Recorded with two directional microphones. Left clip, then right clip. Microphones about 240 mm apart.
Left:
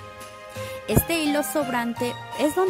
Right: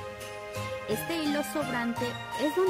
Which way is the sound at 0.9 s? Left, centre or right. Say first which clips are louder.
Left 8 dB; left.